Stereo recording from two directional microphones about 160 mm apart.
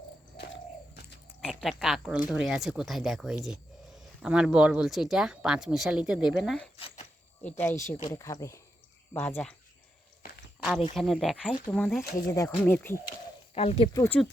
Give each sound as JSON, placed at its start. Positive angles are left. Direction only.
{"t": 1.4, "sound": "speech", "side_deg": -5}
{"t": 6.7, "sound": "a sound", "side_deg": 40}
{"t": 7.6, "sound": "speech", "side_deg": 15}
{"t": 10.6, "sound": "speech", "side_deg": -5}
{"t": 12.3, "sound": "speech", "side_deg": 15}
{"t": 13.1, "sound": "a sound", "side_deg": 40}
{"t": 13.9, "sound": "speech", "side_deg": 15}